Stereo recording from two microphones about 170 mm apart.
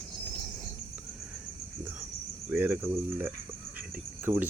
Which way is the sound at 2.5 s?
10° right (ahead or behind).